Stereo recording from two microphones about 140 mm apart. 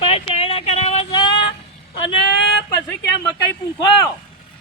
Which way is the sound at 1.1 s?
35° left (ahead or behind).